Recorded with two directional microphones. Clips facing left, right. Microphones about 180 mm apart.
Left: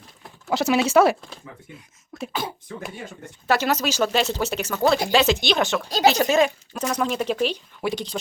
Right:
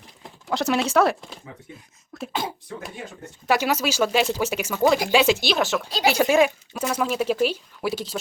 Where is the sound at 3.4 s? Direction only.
10° right (ahead or behind).